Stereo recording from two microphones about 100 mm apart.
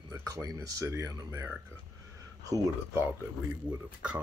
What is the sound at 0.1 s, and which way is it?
Speech, 35° right (ahead or behind).